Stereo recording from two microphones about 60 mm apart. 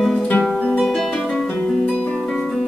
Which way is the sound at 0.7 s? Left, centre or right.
Centre.